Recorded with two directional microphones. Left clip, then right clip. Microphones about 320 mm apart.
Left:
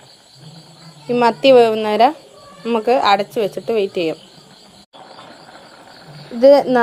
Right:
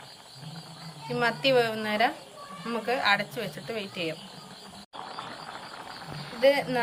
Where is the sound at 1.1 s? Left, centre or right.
Centre.